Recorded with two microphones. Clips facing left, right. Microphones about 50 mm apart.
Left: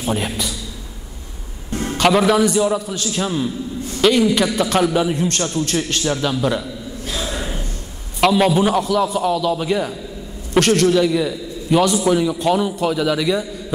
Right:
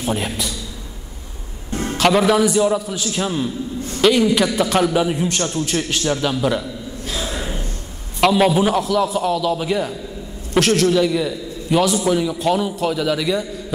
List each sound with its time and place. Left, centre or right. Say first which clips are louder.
0.0 s a man's voice: left 1 dB; centre
1.9 s a man's voice: even; centre
7.1 s gasp: even; centre
8.2 s a man's voice: even; centre